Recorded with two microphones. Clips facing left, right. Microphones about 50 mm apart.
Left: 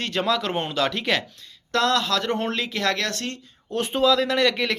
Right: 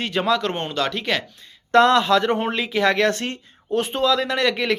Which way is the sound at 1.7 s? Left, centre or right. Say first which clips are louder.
Right 7 dB; right.